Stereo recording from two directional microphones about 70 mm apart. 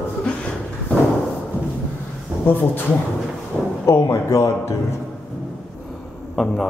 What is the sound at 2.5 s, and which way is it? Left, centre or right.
Speech, left.